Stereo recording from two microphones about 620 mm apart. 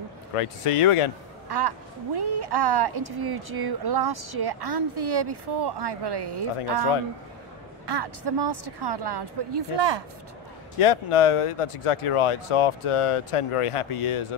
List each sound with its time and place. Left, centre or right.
0.4 s speech: left
1.5 s speech: right
7.8 s speech: right
10.8 s speech: left